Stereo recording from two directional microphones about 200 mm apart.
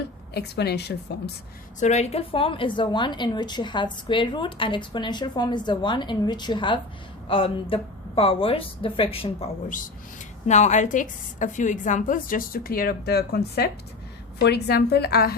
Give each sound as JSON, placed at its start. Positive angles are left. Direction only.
{"t": 0.0, "sound": "a woman's voice", "side_deg": 55}
{"t": 1.8, "sound": "a woman's voice", "side_deg": 35}
{"t": 9.6, "sound": "a woman's voice", "side_deg": 40}